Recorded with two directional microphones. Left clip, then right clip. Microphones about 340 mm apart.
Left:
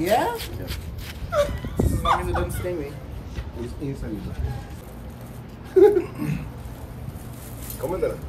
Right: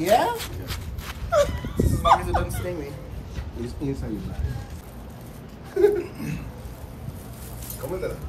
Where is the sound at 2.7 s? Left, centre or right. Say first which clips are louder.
Left 3 dB; centre.